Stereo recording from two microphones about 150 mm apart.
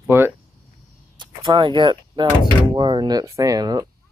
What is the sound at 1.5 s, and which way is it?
Speech, 35° right (ahead or behind).